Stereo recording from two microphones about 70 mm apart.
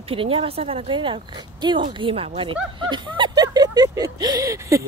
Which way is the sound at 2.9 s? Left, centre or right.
Right.